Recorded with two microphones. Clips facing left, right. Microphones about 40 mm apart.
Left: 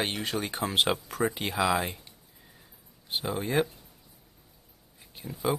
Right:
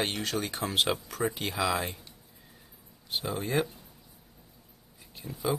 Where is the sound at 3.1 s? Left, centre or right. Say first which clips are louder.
Left 1 dB; centre.